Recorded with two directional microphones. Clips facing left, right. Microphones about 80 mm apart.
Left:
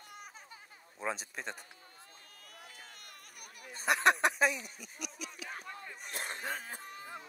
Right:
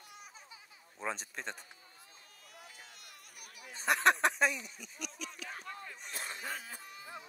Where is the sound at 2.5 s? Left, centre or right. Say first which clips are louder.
Left 1 dB; left.